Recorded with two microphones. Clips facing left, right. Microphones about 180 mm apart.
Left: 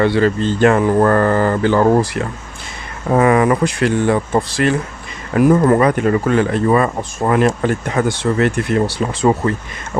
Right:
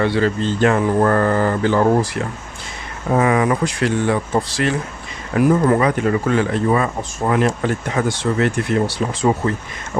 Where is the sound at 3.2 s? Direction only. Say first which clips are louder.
Left 4 dB; 55° left (ahead or behind).